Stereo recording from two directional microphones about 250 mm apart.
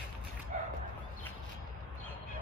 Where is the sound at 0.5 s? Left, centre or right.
Right.